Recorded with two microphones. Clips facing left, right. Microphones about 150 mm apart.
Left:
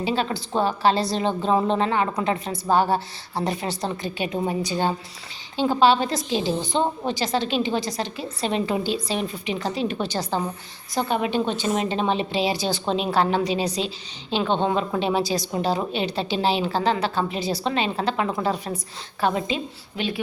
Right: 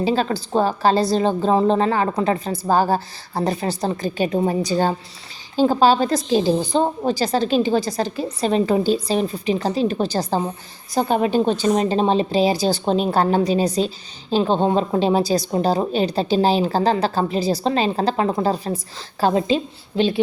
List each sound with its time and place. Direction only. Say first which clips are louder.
0.0 s a woman's voice: right 5 dB; 40° right (ahead or behind)